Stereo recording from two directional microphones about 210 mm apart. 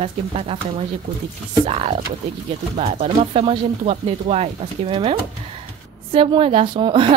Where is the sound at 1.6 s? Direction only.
30° right (ahead or behind).